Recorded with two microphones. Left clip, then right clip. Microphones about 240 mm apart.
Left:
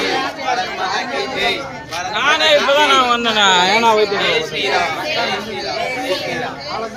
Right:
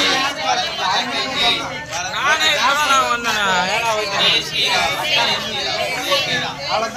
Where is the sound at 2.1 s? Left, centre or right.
Left.